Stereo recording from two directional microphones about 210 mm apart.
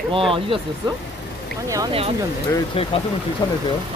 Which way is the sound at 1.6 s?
15° right (ahead or behind).